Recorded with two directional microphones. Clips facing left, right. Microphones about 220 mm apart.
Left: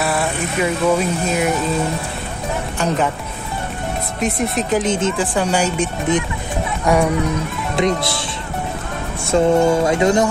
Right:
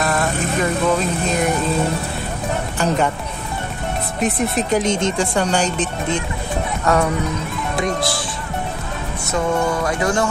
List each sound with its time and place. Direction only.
0.0 s speech: 10° left (ahead or behind)
4.2 s speech: centre (ahead or behind)
7.7 s music: 25° left (ahead or behind)
9.2 s music: 25° left (ahead or behind)